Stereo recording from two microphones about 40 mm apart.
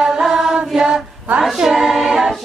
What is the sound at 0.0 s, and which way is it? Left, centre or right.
Chant, centre.